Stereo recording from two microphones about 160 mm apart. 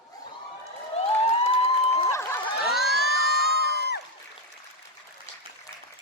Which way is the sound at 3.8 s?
90° left.